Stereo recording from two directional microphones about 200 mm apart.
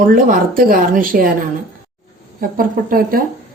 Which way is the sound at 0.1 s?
45° right (ahead or behind).